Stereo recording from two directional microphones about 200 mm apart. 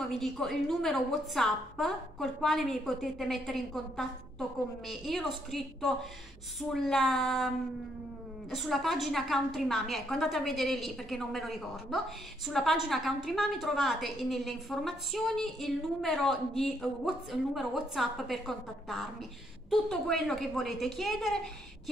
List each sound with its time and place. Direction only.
0.0 s a woman's voice: centre (ahead or behind)